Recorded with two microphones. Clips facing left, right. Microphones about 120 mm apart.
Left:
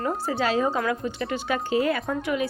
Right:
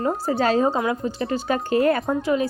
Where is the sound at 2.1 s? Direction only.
35° right (ahead or behind).